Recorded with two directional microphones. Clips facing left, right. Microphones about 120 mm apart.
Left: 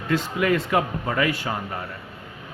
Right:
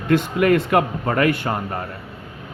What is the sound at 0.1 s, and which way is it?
A man's voice, 55° right (ahead or behind).